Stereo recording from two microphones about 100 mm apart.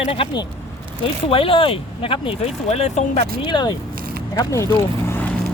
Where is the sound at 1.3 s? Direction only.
65° left (ahead or behind); by 2.9 s 90° left.